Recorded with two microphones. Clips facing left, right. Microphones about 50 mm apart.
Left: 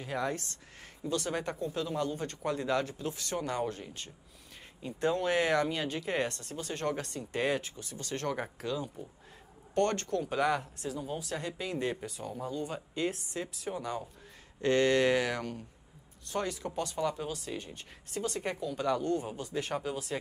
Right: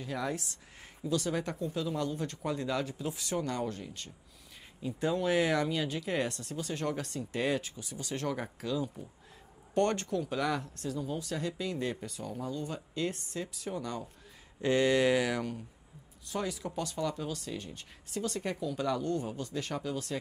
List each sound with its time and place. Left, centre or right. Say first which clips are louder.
0.0 s speech: left 2 dB; centre
1.0 s speech: right 1 dB; centre
3.3 s speech: left 1 dB; centre
7.2 s speech: right 1 dB; centre
7.8 s speech: even; centre
8.3 s speech: left 1 dB; centre
9.8 s speech: even; centre
10.2 s speech: left 3 dB; centre
14.6 s speech: left 1 dB; centre